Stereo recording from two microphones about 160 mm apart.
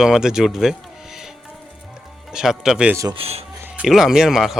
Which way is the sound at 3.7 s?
Centre (ahead or behind).